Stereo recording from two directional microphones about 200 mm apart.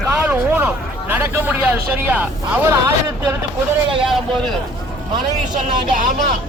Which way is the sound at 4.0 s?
Centre (ahead or behind).